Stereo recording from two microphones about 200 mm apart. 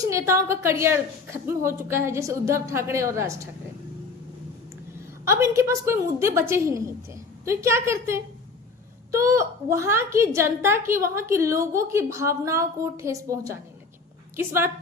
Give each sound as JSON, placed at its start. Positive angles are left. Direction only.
{"t": 0.0, "sound": "a woman's voice", "side_deg": -15}
{"t": 5.2, "sound": "a woman's voice", "side_deg": -15}